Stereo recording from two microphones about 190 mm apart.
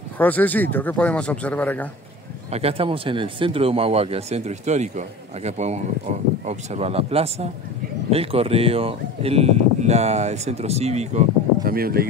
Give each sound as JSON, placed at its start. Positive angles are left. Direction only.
{"t": 0.2, "sound": "speech", "side_deg": 10}
{"t": 2.5, "sound": "speech", "side_deg": -30}
{"t": 11.6, "sound": "speech", "side_deg": -50}